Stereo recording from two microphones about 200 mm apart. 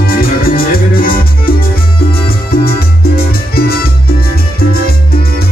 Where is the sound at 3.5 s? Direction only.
50° left (ahead or behind).